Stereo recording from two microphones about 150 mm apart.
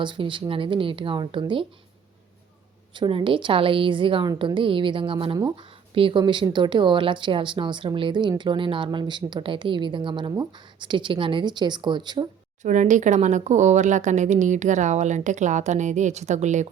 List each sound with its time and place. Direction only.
0.0 s a woman's voice: 35° right (ahead or behind)
2.9 s a woman's voice: 35° right (ahead or behind)
12.6 s speech: 55° right (ahead or behind)